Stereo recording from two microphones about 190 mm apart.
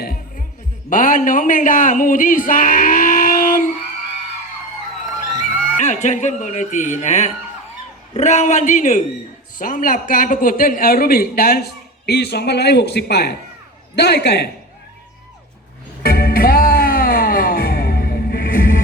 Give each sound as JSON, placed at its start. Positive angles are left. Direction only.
{"t": 0.0, "sound": "music", "side_deg": 50}
{"t": 0.9, "sound": "speech", "side_deg": 45}
{"t": 5.4, "sound": "a man's voice", "side_deg": 40}
{"t": 16.0, "sound": "music", "side_deg": 50}